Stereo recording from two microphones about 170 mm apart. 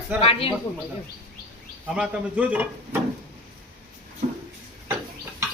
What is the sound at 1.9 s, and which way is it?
Speech, 5° right (ahead or behind).